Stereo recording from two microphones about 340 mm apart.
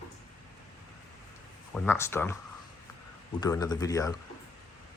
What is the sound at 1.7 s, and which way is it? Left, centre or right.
Speech, centre.